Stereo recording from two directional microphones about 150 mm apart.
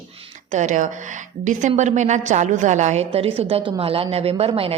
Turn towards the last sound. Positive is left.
turn(degrees=-40)  # may be behind; listen again after turning